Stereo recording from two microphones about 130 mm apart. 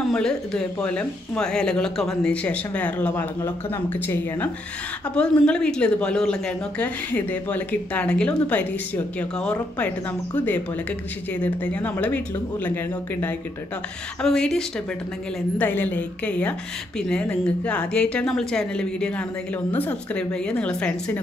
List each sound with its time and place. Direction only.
0.1 s speech: 5° left (ahead or behind)
14.2 s a woman's voice: 5° left (ahead or behind)